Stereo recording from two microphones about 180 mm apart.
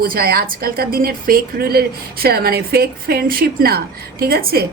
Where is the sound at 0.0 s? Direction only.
55° right (ahead or behind).